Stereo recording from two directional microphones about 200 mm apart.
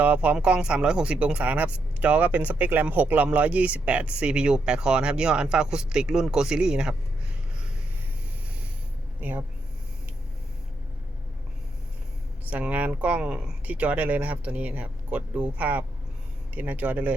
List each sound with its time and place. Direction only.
0.0 s speech: 5° right (ahead or behind)
12.5 s speech: 5° right (ahead or behind)